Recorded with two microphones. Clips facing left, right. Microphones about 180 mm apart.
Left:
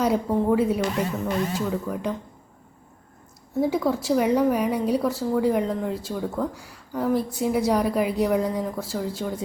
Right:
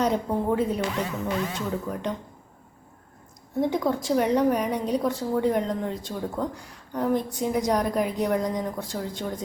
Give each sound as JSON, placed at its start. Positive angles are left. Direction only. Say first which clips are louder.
{"t": 0.0, "sound": "a woman's voice", "louder": "left 2 dB", "side_deg": 5}
{"t": 0.8, "sound": "music", "louder": "left 3 dB", "side_deg": 45}
{"t": 1.5, "sound": "a woman's voice", "louder": "left 3 dB", "side_deg": 5}
{"t": 3.6, "sound": "a woman's voice", "louder": "left 2 dB", "side_deg": 5}